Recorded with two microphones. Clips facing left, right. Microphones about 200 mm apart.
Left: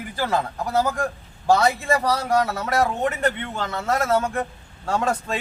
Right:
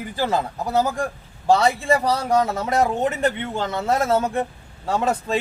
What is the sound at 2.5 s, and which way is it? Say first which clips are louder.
Speech: right 2 dB; 20° right (ahead or behind).